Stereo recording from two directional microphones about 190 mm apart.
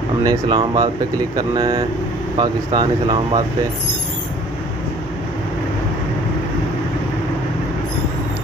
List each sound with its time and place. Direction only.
0.2 s speech: 25° right (ahead or behind)